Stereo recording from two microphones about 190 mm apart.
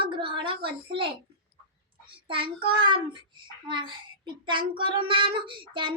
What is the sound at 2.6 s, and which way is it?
A child's voice, 25° right (ahead or behind).